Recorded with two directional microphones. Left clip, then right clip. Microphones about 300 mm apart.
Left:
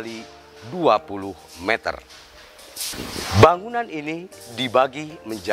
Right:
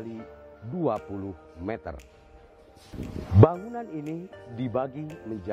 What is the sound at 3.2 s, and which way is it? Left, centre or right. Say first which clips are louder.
Speech: left 7 dB; centre.